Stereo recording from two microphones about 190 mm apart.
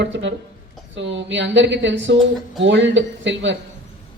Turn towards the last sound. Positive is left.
turn(degrees=-75)  # may be behind; listen again after turning